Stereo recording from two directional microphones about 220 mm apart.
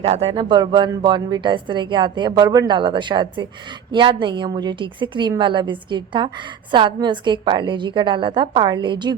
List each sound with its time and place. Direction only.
0.0 s a woman's voice: 25° right (ahead or behind)